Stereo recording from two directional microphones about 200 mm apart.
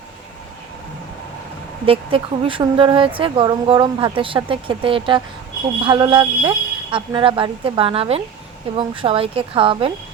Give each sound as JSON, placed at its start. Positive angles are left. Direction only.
{"t": 1.9, "sound": "speech", "side_deg": -25}